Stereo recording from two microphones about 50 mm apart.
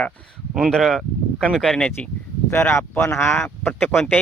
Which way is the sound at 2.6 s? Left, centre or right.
Left.